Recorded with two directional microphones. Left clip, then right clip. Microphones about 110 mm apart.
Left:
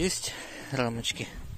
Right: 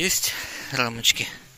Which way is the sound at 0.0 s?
25° left (ahead or behind).